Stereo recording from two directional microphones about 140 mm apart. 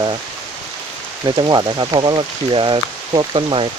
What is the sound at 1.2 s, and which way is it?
Speech, 30° right (ahead or behind).